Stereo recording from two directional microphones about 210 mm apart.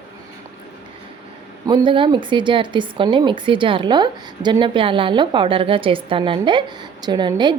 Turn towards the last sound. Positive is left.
turn(degrees=-20)  # may be behind; listen again after turning